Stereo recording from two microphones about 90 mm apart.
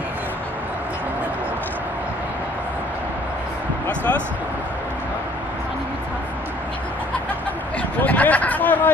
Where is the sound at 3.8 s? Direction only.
20° left (ahead or behind).